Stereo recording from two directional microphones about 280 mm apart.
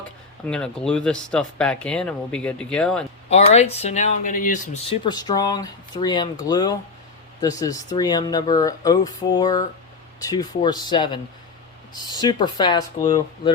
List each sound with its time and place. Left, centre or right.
0.4 s speech: centre
3.2 s speech: left